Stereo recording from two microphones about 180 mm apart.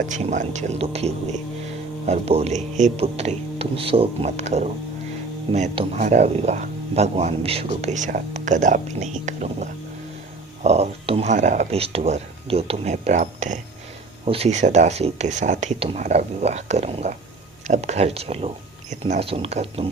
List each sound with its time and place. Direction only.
0.0 s speech: 40° right (ahead or behind)